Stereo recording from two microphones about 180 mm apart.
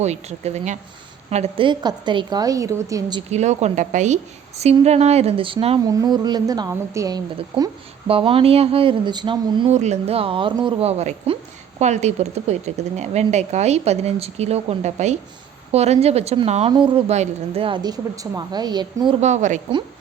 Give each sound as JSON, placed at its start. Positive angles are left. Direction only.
{"t": 0.0, "sound": "a woman's voice", "side_deg": -40}
{"t": 3.2, "sound": "speech", "side_deg": -40}
{"t": 5.8, "sound": "a woman's voice", "side_deg": -20}
{"t": 7.3, "sound": "speech", "side_deg": -30}
{"t": 9.7, "sound": "a woman's voice", "side_deg": -40}
{"t": 19.2, "sound": "a woman's voice", "side_deg": -40}